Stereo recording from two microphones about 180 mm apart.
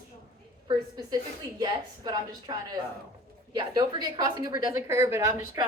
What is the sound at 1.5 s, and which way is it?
A woman's voice, 25° right (ahead or behind).